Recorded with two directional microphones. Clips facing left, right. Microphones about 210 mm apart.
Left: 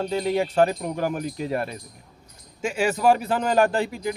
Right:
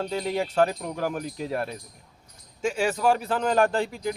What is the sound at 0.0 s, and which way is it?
Speech, centre (ahead or behind).